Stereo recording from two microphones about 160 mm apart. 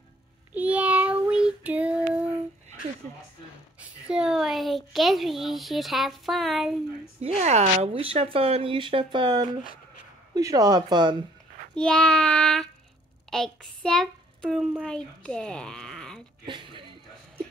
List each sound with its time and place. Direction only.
0.6 s child singing: 10° right (ahead or behind)
3.8 s speech: 5° right (ahead or behind)
7.2 s speech: 40° right (ahead or behind); by 11.1 s 25° right (ahead or behind)
11.7 s speech: 5° left (ahead or behind)
16.4 s a sound: 30° right (ahead or behind)